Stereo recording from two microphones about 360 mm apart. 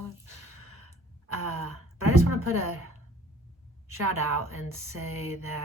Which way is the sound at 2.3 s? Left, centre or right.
Right.